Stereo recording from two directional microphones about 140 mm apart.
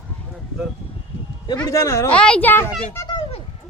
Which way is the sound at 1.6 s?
25° left (ahead or behind).